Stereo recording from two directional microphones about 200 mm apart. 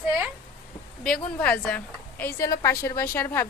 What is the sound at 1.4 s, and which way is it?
A woman's voice, 5° left (ahead or behind).